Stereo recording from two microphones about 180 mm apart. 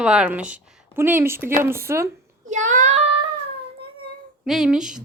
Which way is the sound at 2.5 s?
45° right (ahead or behind).